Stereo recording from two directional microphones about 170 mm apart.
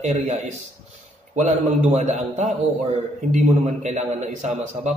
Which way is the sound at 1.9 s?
40° right (ahead or behind).